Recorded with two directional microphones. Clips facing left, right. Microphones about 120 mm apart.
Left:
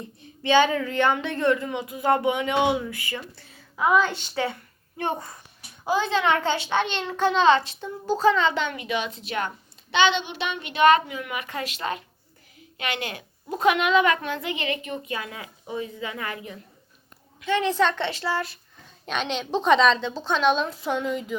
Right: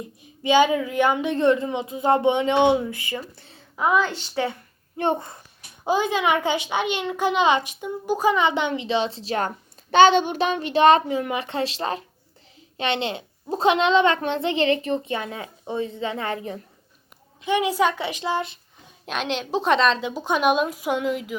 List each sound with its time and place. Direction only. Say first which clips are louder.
0.2 s a child's voice: right 2 dB; 15° right (ahead or behind)
4.0 s a woman's voice: even; 15° left (ahead or behind)
4.9 s a child's voice: right 5 dB; 25° right (ahead or behind)
17.4 s a child's voice: right 1 dB; 10° right (ahead or behind)
19.0 s a woman's voice: right 1 dB; centre (ahead or behind)
20.1 s a child's voice: right 1 dB; 15° right (ahead or behind)